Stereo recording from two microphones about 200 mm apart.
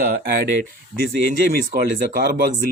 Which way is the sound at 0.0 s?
50° right (ahead or behind).